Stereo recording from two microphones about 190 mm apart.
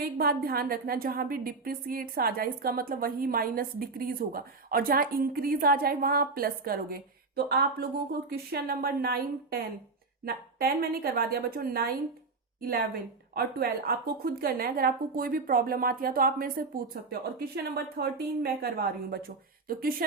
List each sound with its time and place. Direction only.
0.0 s a woman's voice: 50° right (ahead or behind)